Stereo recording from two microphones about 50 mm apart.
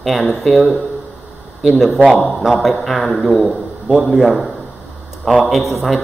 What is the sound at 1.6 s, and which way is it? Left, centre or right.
Speech, centre.